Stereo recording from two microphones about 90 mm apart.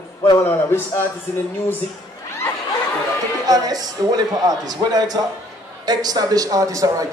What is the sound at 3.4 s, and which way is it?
A man's voice, 45° right (ahead or behind).